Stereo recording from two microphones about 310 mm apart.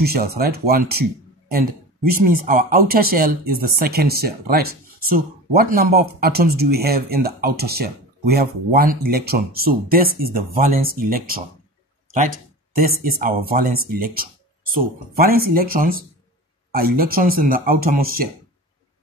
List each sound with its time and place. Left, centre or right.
0.0 s speech: right
2.0 s speech: right
13.0 s speech: right